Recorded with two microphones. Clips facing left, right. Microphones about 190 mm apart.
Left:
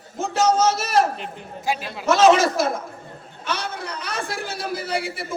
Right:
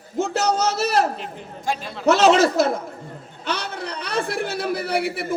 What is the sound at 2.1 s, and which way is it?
A man's voice, 65° right (ahead or behind).